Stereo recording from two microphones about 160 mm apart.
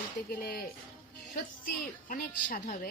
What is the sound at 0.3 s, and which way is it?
Speech, 70° left (ahead or behind).